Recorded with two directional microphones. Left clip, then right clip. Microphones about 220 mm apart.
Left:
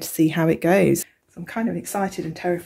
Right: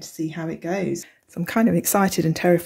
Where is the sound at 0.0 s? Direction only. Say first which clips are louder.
Left 9 dB; 40° left (ahead or behind).